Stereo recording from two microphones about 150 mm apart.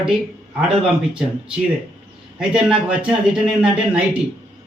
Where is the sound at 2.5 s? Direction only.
5° right (ahead or behind).